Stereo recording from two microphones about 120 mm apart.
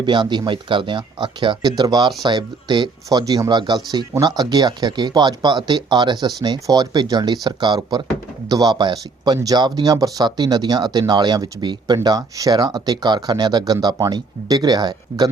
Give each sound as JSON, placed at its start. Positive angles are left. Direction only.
{"t": 0.0, "sound": "speech", "side_deg": -40}